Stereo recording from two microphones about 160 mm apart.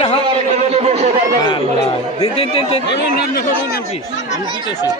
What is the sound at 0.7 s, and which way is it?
Speech, 45° right (ahead or behind).